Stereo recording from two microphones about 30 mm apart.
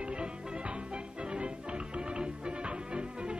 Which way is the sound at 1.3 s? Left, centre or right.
Right.